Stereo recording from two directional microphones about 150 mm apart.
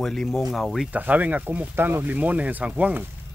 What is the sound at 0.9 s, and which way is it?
Speech, 10° right (ahead or behind).